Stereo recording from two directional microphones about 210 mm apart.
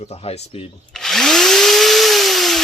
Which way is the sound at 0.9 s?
Centre (ahead or behind).